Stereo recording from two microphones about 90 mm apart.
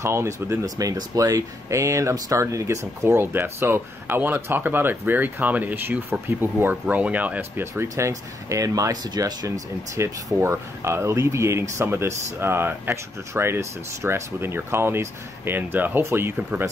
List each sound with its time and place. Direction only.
0.0 s speech: 30° right (ahead or behind)
7.9 s speech: 35° right (ahead or behind)
9.9 s speech: 30° right (ahead or behind)